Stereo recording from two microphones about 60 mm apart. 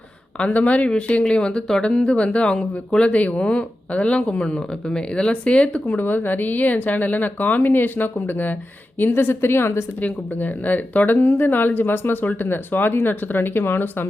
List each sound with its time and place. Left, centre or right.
0.3 s speech: left
10.0 s speech: left